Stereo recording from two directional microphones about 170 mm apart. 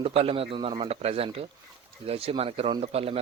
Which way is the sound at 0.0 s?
35° right (ahead or behind).